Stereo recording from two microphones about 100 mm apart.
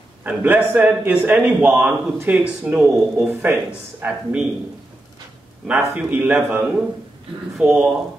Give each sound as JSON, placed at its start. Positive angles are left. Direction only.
{"t": 0.2, "sound": "a man's voice", "side_deg": -20}
{"t": 5.9, "sound": "a man's voice", "side_deg": -15}